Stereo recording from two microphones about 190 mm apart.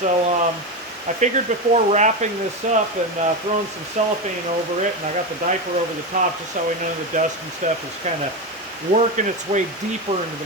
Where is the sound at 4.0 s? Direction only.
40° right (ahead or behind).